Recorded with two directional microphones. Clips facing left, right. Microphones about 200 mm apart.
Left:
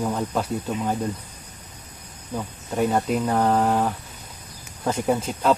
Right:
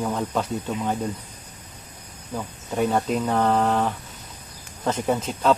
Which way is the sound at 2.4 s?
5° left (ahead or behind).